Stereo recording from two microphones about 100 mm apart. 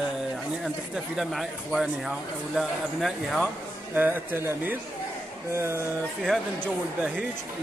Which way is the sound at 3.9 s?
20° right (ahead or behind).